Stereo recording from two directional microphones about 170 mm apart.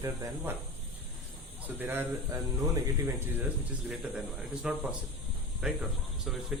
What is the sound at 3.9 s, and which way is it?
A man's voice, 5° right (ahead or behind).